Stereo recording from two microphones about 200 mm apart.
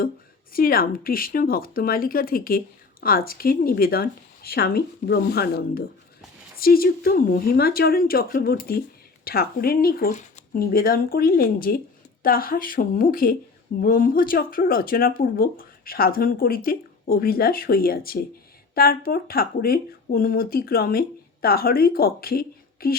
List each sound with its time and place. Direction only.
0.5 s speech: 45° left (ahead or behind)